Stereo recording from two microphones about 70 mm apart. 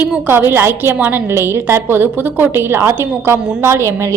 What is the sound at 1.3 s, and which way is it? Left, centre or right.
A woman's voice, right.